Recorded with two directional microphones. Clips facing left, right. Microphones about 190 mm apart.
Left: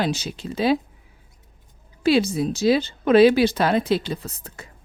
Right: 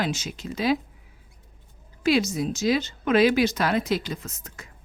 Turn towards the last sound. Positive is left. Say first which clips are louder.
# left 4 dB
turn(degrees=35)  # may be behind; listen again after turning